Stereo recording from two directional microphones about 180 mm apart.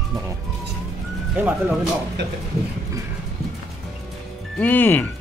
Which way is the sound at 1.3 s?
10° right (ahead or behind).